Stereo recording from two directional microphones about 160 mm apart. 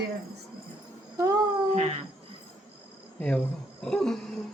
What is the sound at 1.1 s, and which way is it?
Babbling, 20° right (ahead or behind).